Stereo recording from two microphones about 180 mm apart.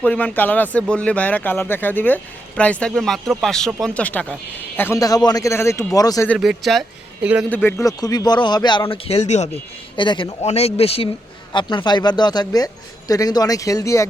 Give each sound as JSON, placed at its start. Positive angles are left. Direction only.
{"t": 0.0, "sound": "speech", "side_deg": 10}
{"t": 6.2, "sound": "speech", "side_deg": 0}
{"t": 7.5, "sound": "speech", "side_deg": 10}
{"t": 9.9, "sound": "speech", "side_deg": 25}